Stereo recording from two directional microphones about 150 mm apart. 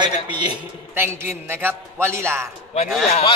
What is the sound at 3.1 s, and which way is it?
Speech, 40° left (ahead or behind).